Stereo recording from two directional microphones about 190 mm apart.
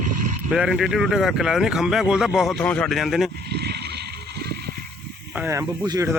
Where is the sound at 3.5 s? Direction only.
60° right (ahead or behind).